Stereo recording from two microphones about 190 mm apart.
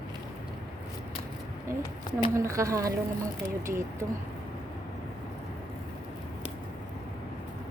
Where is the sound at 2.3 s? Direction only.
15° right (ahead or behind).